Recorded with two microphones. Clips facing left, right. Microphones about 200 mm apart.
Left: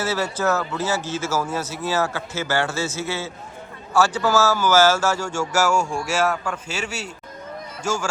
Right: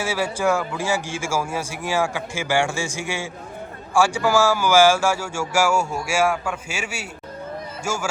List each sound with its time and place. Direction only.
0.0 s speech: 10° right (ahead or behind)